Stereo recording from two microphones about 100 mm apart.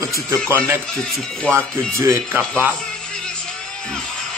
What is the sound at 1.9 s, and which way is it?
Speech, 25° right (ahead or behind).